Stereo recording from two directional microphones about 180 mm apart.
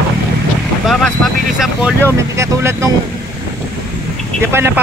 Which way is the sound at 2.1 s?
15° right (ahead or behind).